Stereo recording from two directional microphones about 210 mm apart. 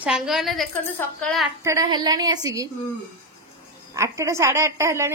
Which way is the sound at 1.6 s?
20° right (ahead or behind).